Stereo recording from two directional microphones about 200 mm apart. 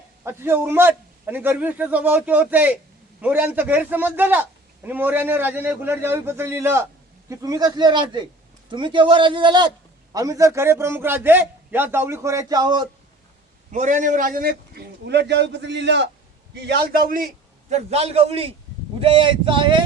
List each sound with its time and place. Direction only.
0.3 s a man's voice: 10° right (ahead or behind)
13.7 s a man's voice: 40° right (ahead or behind)
17.7 s a man's voice: 35° right (ahead or behind)